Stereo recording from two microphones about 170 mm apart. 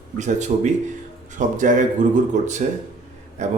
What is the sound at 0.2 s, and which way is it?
Speech, 45° right (ahead or behind).